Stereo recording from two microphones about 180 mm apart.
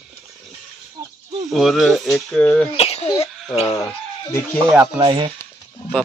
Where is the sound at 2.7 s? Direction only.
35° left (ahead or behind).